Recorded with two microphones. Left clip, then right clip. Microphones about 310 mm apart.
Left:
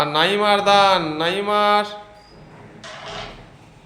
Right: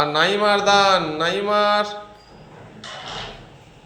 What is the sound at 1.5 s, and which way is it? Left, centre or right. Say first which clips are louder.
Speech: left 1 dB; centre.